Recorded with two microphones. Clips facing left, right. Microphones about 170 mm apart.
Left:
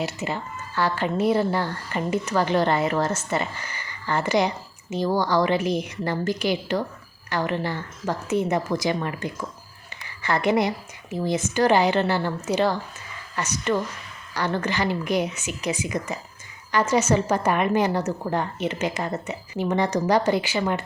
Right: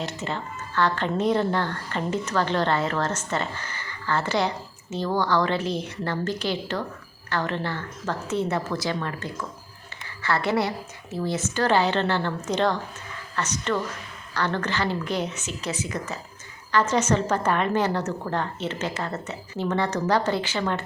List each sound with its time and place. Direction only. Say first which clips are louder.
0.0 s speech: left 2 dB; 10° left (ahead or behind)